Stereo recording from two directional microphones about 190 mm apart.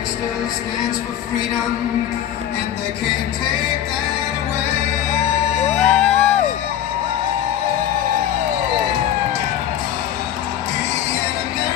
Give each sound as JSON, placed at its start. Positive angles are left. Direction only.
{"t": 5.8, "sound": "music", "side_deg": 5}